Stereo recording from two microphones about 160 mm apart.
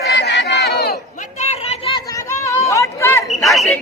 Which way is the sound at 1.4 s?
40° left (ahead or behind).